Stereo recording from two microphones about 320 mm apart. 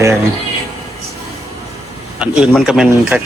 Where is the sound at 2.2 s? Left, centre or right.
Centre.